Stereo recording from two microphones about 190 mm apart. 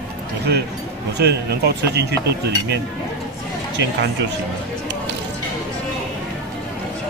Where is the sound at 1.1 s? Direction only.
60° right (ahead or behind).